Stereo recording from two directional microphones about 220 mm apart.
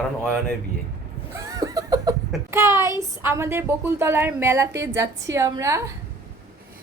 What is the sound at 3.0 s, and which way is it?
A woman's voice, 10° right (ahead or behind).